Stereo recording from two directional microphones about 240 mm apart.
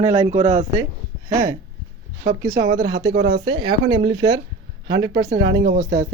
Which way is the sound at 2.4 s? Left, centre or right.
Centre.